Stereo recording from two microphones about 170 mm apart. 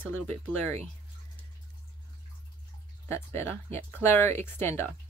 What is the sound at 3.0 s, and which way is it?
Speech, 15° left (ahead or behind).